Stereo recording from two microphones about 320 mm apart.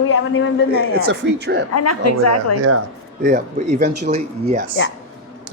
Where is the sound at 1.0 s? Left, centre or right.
Right.